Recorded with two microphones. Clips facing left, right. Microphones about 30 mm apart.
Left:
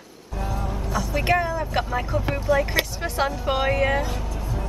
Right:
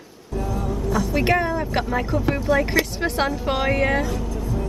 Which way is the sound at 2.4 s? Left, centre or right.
Centre.